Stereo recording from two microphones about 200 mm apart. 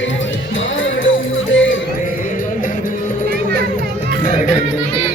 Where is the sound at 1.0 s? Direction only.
75° left (ahead or behind).